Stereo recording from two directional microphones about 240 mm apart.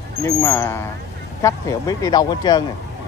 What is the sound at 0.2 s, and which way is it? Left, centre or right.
Speech, centre.